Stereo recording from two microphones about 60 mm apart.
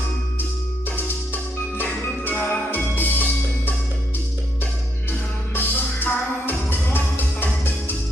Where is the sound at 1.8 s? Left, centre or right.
Left.